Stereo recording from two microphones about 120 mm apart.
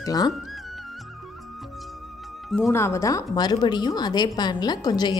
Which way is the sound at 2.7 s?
25° left (ahead or behind).